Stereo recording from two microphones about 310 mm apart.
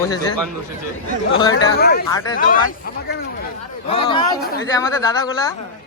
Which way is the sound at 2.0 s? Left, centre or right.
Centre.